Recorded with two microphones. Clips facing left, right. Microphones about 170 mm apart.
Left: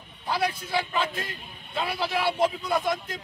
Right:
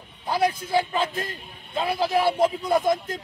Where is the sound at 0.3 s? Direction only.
45° right (ahead or behind).